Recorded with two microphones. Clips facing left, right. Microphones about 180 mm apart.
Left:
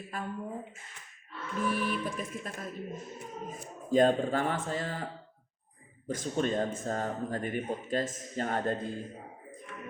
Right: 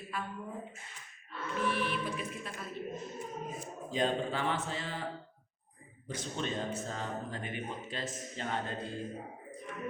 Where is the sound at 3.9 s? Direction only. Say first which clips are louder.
Left 8 dB; 45° left (ahead or behind).